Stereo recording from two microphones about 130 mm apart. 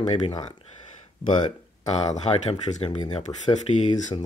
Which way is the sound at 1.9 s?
55° left (ahead or behind).